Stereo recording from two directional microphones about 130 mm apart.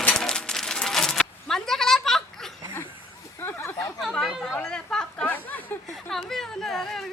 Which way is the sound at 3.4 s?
15° left (ahead or behind).